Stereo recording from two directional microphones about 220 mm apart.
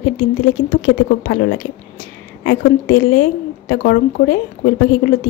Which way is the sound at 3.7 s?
45° left (ahead or behind).